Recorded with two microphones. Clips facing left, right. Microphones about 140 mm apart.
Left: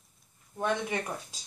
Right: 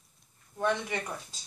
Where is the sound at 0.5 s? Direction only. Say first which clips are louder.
Right 1 dB; 15° left (ahead or behind).